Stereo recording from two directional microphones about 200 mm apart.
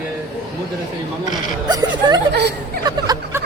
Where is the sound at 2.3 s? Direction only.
55° right (ahead or behind).